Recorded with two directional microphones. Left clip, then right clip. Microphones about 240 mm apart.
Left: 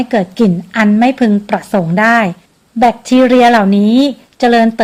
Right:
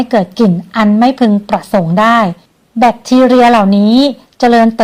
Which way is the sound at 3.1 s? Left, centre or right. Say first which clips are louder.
Right 1 dB; centre.